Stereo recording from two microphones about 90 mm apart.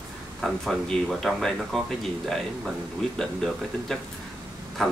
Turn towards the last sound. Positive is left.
turn(degrees=5)  # may be behind; listen again after turning